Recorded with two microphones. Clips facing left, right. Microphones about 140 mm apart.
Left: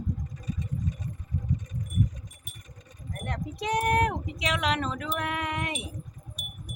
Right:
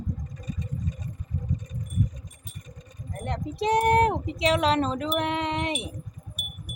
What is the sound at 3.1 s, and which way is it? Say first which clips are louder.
Speech: right 3 dB; 25° right (ahead or behind).